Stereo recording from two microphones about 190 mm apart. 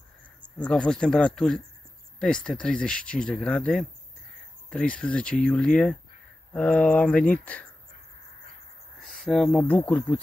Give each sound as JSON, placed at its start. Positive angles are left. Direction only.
{"t": 0.6, "sound": "speech", "side_deg": 5}
{"t": 9.0, "sound": "speech", "side_deg": 5}